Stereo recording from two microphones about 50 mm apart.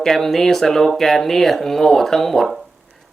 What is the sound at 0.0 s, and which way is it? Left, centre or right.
Speech, centre.